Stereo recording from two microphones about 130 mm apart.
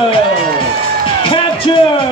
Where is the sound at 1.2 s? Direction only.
40° left (ahead or behind).